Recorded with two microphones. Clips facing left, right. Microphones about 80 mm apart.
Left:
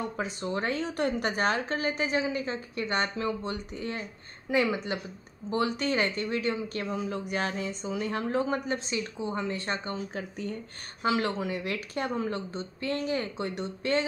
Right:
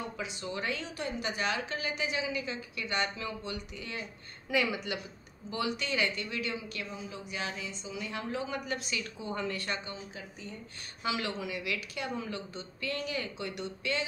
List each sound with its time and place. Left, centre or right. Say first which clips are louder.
0.2 s a woman's voice: left 6 dB; left
6.9 s a woman's voice: left 9 dB; left
9.8 s speech: left 8 dB; left
11.0 s a woman's voice: left 6 dB; left